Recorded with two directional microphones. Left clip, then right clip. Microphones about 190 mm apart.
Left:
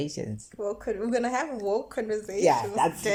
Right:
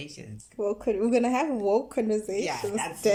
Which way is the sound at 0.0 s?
35° left (ahead or behind).